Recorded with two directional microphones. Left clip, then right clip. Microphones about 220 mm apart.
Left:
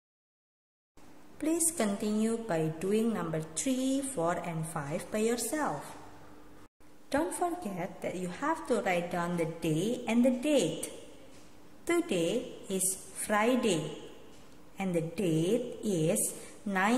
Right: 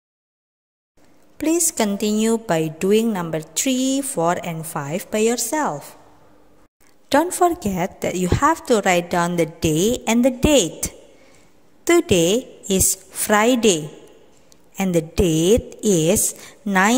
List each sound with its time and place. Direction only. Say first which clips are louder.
1.4 s a woman's voice: right 11 dB; 40° right (ahead or behind)
7.1 s a woman's voice: right 15 dB; 45° right (ahead or behind)
11.8 s a woman's voice: right 14 dB; 45° right (ahead or behind)
14.8 s a woman's voice: right 13 dB; 45° right (ahead or behind)